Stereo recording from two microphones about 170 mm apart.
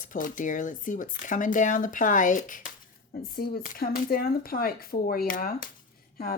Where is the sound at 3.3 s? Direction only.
60° left (ahead or behind).